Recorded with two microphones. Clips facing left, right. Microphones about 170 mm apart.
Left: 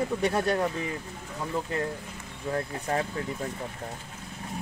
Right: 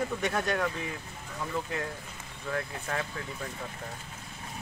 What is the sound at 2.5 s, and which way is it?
Speech, 35° left (ahead or behind).